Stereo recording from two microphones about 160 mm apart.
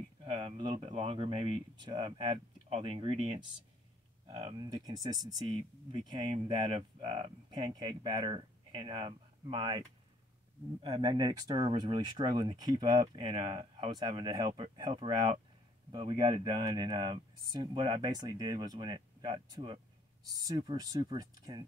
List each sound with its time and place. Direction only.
0.2 s speech: 35° right (ahead or behind)
4.8 s speech: 25° right (ahead or behind)